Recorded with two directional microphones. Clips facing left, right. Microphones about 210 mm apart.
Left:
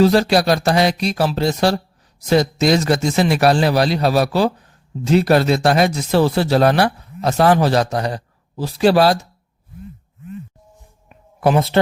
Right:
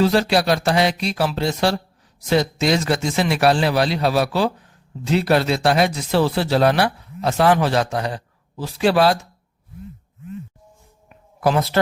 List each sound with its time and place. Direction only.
0.0 s a man's voice: 40° left (ahead or behind)
11.3 s a woman's voice: 25° left (ahead or behind)